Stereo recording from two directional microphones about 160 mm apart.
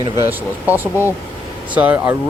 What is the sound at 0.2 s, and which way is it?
Speech, 10° right (ahead or behind).